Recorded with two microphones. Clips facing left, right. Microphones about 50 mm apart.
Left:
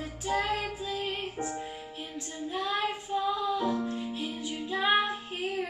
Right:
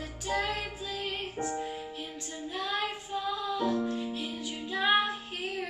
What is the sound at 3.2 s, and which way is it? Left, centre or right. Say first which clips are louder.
Music: left 1 dB; centre.